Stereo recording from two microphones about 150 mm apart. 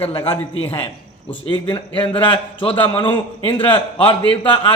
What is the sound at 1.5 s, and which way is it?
A man's voice, 35° left (ahead or behind).